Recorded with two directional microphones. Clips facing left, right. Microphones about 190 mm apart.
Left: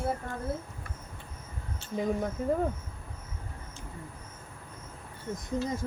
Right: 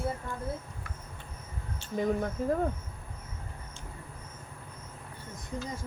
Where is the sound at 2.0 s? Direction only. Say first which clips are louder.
Right 1 dB; 5° left (ahead or behind).